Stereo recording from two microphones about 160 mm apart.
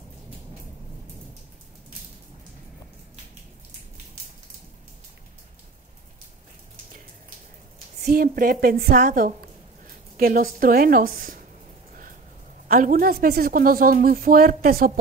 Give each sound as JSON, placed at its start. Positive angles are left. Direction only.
{"t": 8.0, "sound": "a woman's voice", "side_deg": -65}
{"t": 12.6, "sound": "a woman's voice", "side_deg": -65}